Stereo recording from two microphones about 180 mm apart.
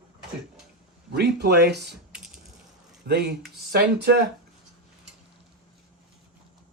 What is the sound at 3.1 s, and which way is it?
Speech, 65° right (ahead or behind).